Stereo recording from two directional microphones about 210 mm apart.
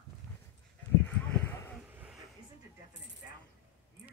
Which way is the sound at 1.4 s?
10° left (ahead or behind).